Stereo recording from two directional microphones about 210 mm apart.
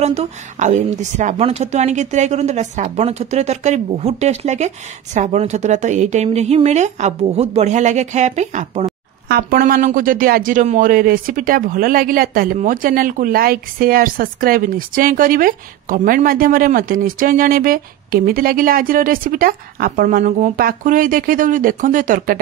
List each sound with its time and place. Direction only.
0.0 s speech: 30° right (ahead or behind)